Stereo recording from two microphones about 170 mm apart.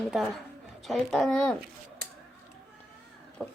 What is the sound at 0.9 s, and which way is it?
Speech, centre (ahead or behind).